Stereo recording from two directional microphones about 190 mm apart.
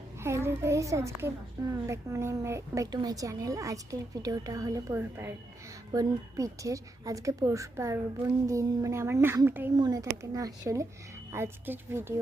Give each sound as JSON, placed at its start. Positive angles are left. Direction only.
{"t": 0.2, "sound": "speech", "side_deg": -15}